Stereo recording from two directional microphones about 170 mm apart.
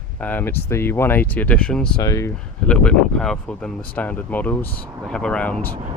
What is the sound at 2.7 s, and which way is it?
Speech, 5° left (ahead or behind).